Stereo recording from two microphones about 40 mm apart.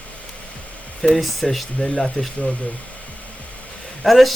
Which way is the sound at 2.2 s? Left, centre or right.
Left.